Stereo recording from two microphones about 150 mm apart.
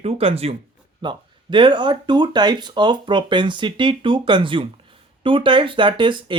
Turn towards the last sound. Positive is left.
turn(degrees=-35)  # may be behind; listen again after turning